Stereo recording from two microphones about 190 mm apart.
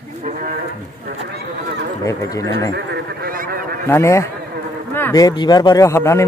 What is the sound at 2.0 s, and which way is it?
Speech, 20° left (ahead or behind).